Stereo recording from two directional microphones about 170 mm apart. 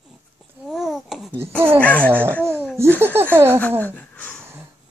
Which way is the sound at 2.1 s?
10° right (ahead or behind).